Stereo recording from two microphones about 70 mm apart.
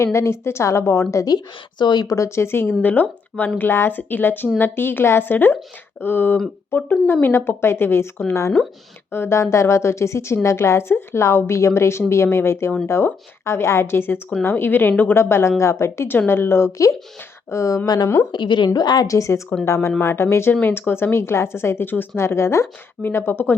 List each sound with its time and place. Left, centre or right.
0.0 s speech: left
1.1 s speech: left
1.8 s a woman's voice: left
2.1 s speech: left
15.1 s speech: left
17.8 s a woman's voice: left
19.0 s speech: left